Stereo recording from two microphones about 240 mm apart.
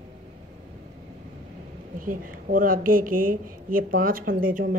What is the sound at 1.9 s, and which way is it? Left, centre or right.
Speech, right.